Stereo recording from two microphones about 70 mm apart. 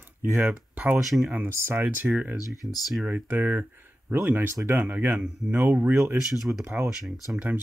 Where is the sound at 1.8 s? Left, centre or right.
Right.